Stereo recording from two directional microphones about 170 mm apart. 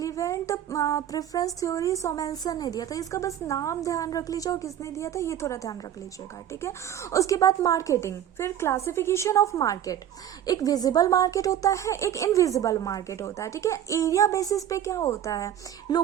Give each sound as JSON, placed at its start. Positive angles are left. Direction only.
{"t": 0.0, "sound": "a woman's voice", "side_deg": 20}